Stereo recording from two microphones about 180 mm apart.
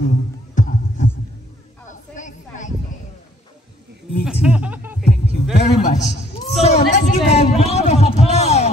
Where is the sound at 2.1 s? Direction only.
45° left (ahead or behind).